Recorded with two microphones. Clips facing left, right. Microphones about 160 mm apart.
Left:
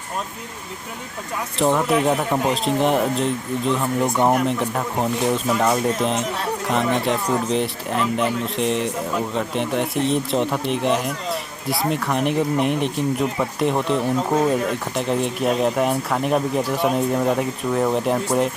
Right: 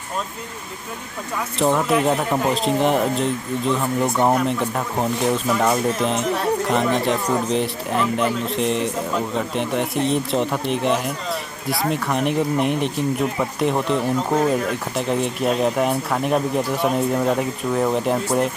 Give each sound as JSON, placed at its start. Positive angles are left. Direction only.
{"t": 1.5, "sound": "speech", "side_deg": 0}